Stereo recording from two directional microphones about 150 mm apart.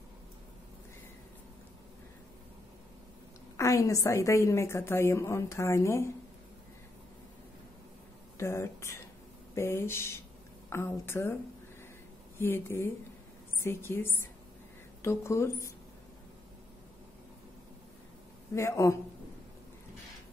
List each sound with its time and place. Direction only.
3.5 s a woman's voice: 20° left (ahead or behind)
8.4 s a woman's voice: 20° left (ahead or behind)
12.4 s a woman's voice: 15° left (ahead or behind)
18.5 s a woman's voice: 20° left (ahead or behind)